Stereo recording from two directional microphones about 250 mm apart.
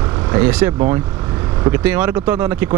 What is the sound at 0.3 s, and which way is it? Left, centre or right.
Speech, centre.